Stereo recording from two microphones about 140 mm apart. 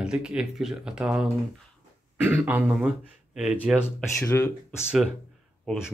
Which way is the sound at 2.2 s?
15° right (ahead or behind).